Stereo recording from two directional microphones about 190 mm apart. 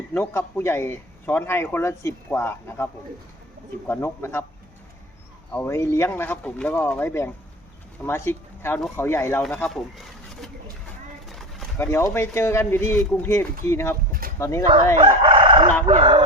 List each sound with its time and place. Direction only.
0.1 s speech: 10° left (ahead or behind)
5.5 s speech: 10° left (ahead or behind)
11.8 s speech: 15° left (ahead or behind)
14.1 s a sound: 50° right (ahead or behind)
14.3 s speech: 15° left (ahead or behind)
14.9 s crowing: 25° right (ahead or behind)
15.9 s a sound: 30° right (ahead or behind)